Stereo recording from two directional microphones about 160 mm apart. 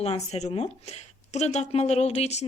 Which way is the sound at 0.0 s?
40° left (ahead or behind).